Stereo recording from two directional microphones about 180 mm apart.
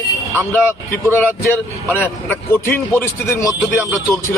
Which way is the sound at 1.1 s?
10° left (ahead or behind).